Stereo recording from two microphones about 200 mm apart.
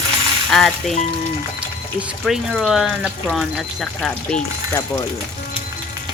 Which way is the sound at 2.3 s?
Centre (ahead or behind).